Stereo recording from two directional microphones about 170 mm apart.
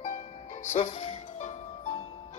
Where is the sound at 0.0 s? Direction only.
40° left (ahead or behind).